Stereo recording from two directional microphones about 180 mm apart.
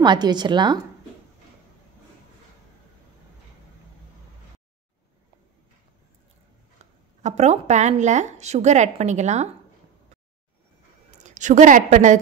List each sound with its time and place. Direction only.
0.0 s a woman's voice: 25° right (ahead or behind)
7.2 s speech: 40° right (ahead or behind)
11.1 s a woman's voice: 40° right (ahead or behind)